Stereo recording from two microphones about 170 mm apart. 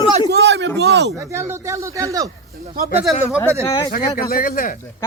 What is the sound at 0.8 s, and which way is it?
Speech, 75° right (ahead or behind).